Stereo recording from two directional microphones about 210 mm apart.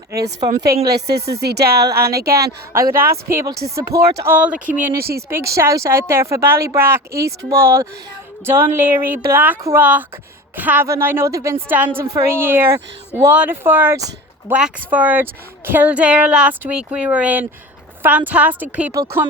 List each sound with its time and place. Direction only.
0.5 s speech: 45° right (ahead or behind)
2.7 s a woman's voice: 15° right (ahead or behind)
4.9 s speech: 50° right (ahead or behind)
5.3 s a woman's voice: 15° right (ahead or behind)